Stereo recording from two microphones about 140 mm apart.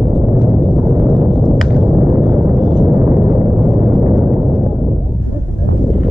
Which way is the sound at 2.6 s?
30° right (ahead or behind).